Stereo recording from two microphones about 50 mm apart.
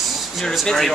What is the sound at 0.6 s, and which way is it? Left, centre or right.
Speech, centre.